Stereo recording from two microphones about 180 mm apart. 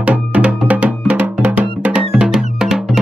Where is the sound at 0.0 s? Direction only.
10° right (ahead or behind).